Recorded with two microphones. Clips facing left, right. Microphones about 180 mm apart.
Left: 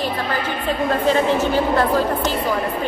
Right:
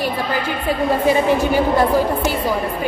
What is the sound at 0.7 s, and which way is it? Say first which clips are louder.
A woman's voice: right 2 dB; 10° right (ahead or behind).